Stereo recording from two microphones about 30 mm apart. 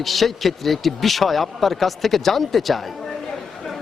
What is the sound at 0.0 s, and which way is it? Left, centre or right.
A man's voice, centre.